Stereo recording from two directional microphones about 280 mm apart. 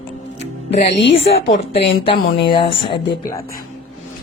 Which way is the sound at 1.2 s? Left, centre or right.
Left.